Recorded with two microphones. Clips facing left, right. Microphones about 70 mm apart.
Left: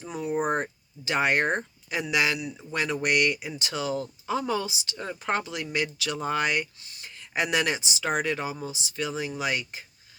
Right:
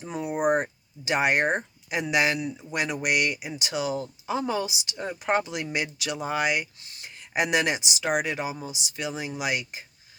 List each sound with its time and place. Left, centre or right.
0.0 s speech: right
6.7 s a sound: right
7.9 s speech: centre